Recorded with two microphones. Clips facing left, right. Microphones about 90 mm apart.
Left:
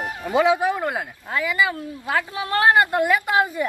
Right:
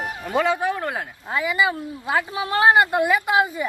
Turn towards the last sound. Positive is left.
turn(degrees=-15)  # may be behind; listen again after turning